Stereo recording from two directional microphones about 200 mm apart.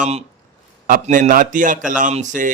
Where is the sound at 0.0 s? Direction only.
30° right (ahead or behind).